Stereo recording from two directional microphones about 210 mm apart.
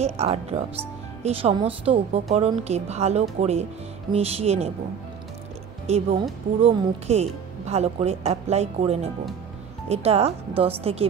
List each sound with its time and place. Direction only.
0.0 s speech: 30° right (ahead or behind)
5.9 s speech: 30° right (ahead or behind)